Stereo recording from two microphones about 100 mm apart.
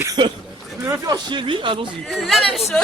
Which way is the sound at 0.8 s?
30° right (ahead or behind).